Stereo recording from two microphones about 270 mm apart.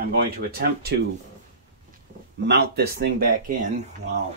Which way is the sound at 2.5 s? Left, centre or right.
Right.